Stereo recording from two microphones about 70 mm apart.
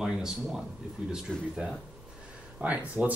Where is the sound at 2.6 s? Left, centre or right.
Right.